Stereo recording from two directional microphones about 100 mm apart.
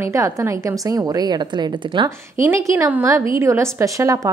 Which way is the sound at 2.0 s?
30° right (ahead or behind).